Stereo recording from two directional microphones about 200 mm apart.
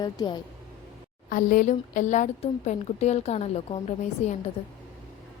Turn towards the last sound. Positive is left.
turn(degrees=30)  # may be behind; listen again after turning